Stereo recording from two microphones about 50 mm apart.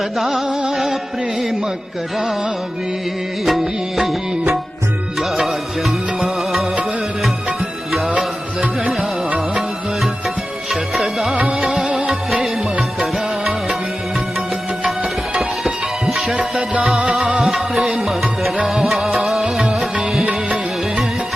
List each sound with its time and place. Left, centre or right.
0.2 s music: centre
0.4 s music: centre
3.4 s music: centre
5.4 s music: centre
9.6 s music: centre
11.3 s music: right
15.4 s music: centre